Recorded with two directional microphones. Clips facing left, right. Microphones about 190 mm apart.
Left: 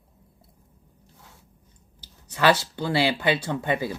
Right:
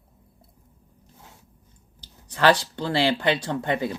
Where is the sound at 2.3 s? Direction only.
10° left (ahead or behind).